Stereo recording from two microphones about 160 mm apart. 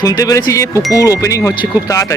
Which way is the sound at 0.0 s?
20° left (ahead or behind).